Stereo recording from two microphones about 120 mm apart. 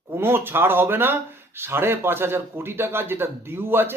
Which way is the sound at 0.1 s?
20° right (ahead or behind).